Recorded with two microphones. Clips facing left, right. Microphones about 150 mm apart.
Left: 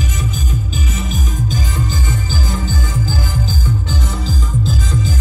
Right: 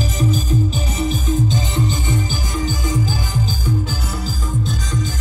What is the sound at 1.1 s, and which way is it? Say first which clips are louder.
Music: right 4 dB; 20° right (ahead or behind).